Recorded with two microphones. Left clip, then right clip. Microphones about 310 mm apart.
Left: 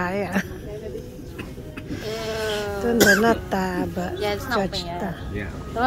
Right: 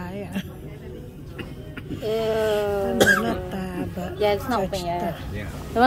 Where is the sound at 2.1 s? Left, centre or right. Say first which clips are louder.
Right 5 dB; right.